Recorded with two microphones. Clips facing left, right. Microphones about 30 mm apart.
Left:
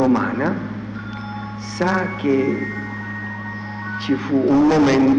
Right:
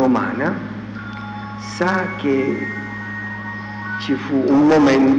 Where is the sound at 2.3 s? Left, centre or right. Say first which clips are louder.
Even; right.